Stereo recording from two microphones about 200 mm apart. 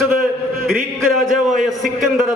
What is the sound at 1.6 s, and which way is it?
Speech, centre (ahead or behind).